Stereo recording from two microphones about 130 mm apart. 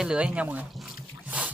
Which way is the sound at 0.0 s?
10° right (ahead or behind).